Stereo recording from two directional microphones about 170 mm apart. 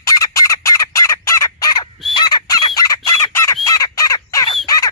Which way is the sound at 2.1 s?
25° left (ahead or behind).